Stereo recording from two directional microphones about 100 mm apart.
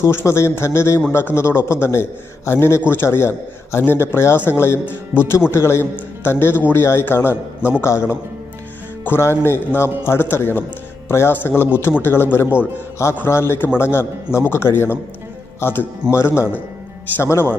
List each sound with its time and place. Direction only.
0.0 s a man's voice: 25° left (ahead or behind)